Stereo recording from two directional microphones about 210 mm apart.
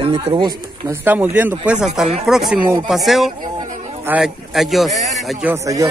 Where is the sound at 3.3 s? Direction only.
40° right (ahead or behind).